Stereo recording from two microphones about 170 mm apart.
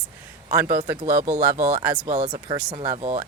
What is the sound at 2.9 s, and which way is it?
Speech, 35° right (ahead or behind).